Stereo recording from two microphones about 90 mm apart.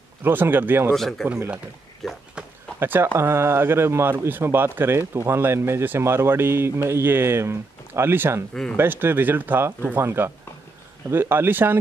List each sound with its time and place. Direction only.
0.2 s speech: 20° right (ahead or behind)
0.9 s speech: 5° left (ahead or behind)
2.8 s speech: 25° right (ahead or behind)